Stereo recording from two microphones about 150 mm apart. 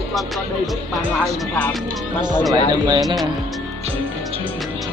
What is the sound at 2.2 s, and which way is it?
Speech, 30° right (ahead or behind).